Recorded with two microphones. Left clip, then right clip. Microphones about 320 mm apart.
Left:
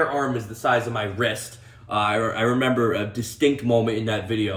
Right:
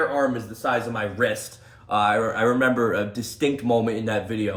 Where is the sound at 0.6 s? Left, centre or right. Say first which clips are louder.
Left 3 dB; centre.